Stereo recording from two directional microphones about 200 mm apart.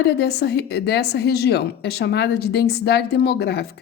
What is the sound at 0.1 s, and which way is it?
A woman's voice, 55° left (ahead or behind).